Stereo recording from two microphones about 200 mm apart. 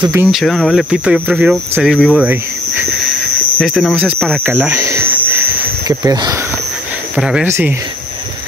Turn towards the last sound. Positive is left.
turn(degrees=-5)  # may be behind; listen again after turning